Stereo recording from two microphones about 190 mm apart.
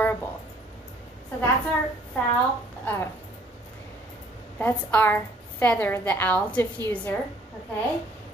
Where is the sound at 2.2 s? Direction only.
15° left (ahead or behind).